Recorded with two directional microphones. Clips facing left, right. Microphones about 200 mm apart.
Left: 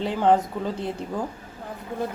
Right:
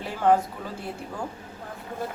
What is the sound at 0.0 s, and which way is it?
Speech, 20° left (ahead or behind).